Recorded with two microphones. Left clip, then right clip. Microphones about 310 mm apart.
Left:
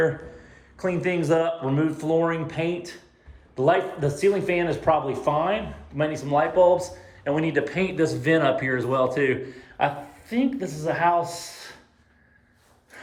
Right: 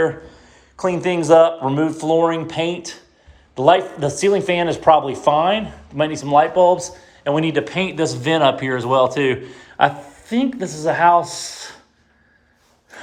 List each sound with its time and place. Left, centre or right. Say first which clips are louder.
0.0 s speech: right 4 dB; centre
10.5 s speech: right 4 dB; right
10.8 s speech: right 8 dB; right
11.1 s speech: right 8 dB; right